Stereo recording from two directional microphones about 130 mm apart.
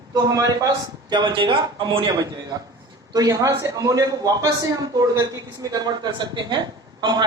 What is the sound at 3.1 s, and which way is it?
A man's voice, 25° right (ahead or behind).